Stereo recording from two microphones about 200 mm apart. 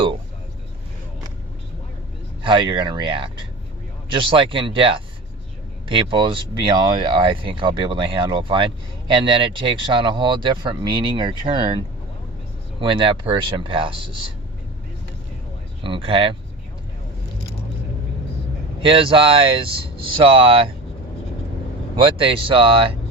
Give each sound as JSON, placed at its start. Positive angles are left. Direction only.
{"t": 2.4, "sound": "speech", "side_deg": -25}
{"t": 12.8, "sound": "speech", "side_deg": -25}
{"t": 15.8, "sound": "speech", "side_deg": -25}
{"t": 18.8, "sound": "speech", "side_deg": -25}
{"t": 21.9, "sound": "speech", "side_deg": -25}